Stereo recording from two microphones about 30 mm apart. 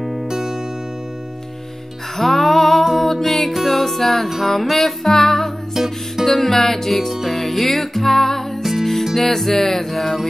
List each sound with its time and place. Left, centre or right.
0.3 s music: centre
2.1 s music: centre
5.8 s music: centre
6.2 s music: centre